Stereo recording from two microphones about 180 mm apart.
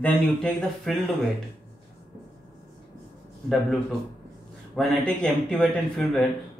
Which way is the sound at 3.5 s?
Centre (ahead or behind).